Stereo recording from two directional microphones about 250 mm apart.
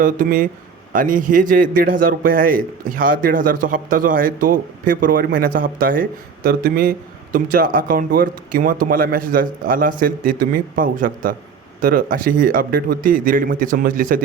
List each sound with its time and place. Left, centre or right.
0.0 s a man's voice: right